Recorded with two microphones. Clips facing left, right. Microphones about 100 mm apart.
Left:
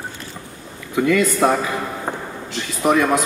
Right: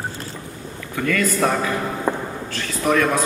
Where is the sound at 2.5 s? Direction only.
15° left (ahead or behind).